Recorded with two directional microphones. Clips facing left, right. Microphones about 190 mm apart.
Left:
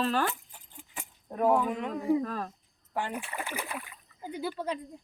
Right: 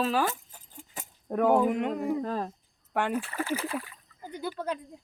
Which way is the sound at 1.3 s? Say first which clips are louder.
Right 2 dB; 75° right (ahead or behind).